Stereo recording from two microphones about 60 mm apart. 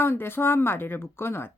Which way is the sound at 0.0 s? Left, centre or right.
Left.